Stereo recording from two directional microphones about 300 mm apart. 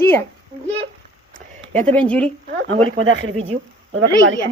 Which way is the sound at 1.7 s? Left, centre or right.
Centre.